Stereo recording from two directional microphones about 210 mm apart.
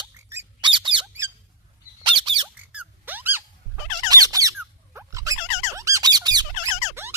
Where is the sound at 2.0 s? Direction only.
25° right (ahead or behind).